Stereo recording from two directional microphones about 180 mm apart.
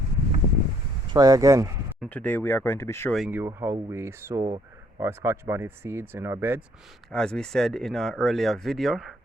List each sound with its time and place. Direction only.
1.1 s speech: 20° right (ahead or behind)
2.0 s speech: 10° left (ahead or behind)
3.2 s speech: 10° right (ahead or behind)
7.1 s speech: 5° left (ahead or behind)